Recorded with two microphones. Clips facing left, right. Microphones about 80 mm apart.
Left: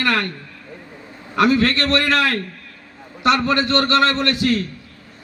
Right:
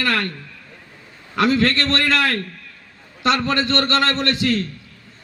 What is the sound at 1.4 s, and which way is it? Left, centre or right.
Speech, left.